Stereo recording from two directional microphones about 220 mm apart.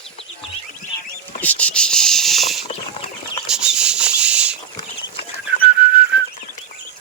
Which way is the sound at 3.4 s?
5° right (ahead or behind).